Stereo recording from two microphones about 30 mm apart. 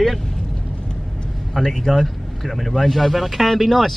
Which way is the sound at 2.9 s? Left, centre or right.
Centre.